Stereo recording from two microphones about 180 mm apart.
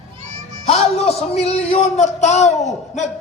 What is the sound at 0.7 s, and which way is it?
A man's voice, 35° left (ahead or behind).